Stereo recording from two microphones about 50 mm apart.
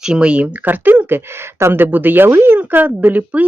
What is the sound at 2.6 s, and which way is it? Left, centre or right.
Speech, right.